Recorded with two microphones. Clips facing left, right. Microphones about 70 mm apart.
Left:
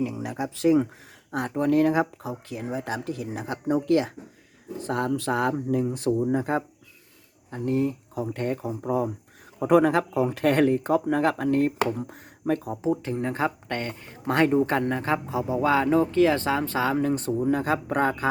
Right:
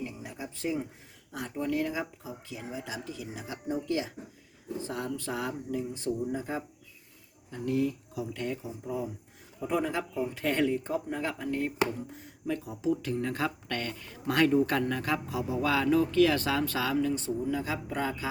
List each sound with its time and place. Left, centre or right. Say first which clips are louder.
0.0 s speech: left 10 dB; left
1.3 s speech: left 9 dB; left
7.5 s speech: left 4 dB; left